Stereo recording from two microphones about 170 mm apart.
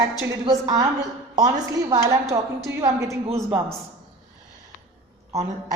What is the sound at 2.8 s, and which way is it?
Speech, 20° right (ahead or behind).